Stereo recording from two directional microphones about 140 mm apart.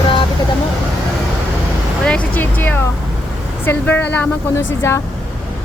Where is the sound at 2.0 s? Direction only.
10° left (ahead or behind).